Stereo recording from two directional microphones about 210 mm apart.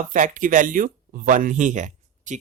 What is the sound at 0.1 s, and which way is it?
Speech, 40° right (ahead or behind).